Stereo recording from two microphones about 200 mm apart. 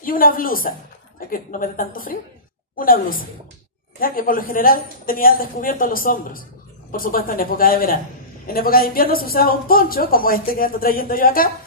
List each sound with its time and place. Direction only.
0.0 s a woman's voice: 45° left (ahead or behind)